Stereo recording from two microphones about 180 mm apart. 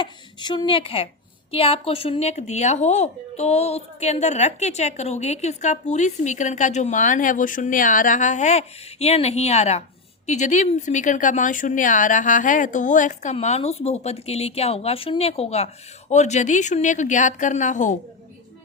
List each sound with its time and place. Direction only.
0.0 s a woman's voice: 25° left (ahead or behind); by 17.9 s 45° left (ahead or behind)